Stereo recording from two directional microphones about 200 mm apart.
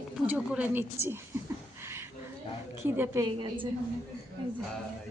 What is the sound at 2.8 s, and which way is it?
Speech, 15° right (ahead or behind).